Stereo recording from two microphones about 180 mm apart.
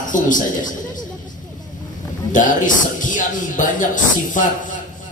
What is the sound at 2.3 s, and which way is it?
A man's voice, 45° left (ahead or behind).